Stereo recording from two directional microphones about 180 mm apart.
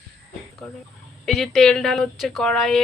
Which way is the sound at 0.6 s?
Centre (ahead or behind).